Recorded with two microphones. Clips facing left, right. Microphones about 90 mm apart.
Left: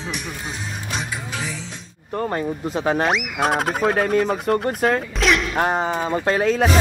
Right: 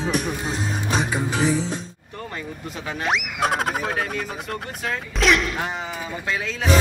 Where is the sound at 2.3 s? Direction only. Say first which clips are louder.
Left 9 dB; 40° left (ahead or behind).